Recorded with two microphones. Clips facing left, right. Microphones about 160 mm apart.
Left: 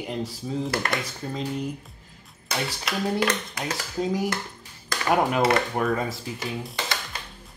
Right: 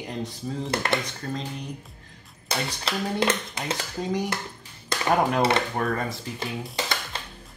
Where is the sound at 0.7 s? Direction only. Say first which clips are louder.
Right 4 dB; 25° right (ahead or behind).